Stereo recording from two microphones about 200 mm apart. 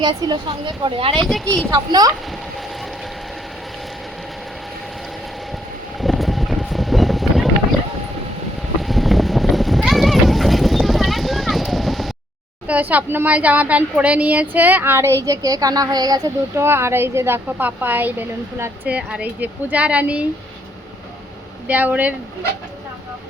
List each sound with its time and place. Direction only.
0.0 s speech: 20° right (ahead or behind)
6.0 s vehicle: centre (ahead or behind)
8.8 s a sound: centre (ahead or behind)
12.6 s speech: 10° right (ahead or behind)
21.7 s speech: 10° right (ahead or behind)